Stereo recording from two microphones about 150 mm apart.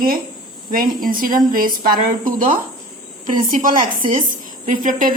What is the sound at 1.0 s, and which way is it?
Speech, 70° right (ahead or behind).